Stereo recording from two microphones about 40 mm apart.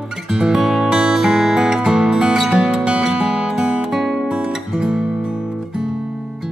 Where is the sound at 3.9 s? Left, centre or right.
Centre.